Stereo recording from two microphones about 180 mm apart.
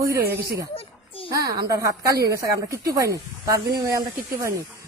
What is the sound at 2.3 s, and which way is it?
Speech, 15° right (ahead or behind).